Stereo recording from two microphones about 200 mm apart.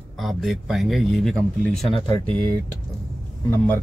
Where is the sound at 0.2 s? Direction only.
Centre (ahead or behind).